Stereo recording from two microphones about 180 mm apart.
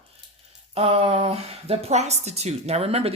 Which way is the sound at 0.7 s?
35° right (ahead or behind).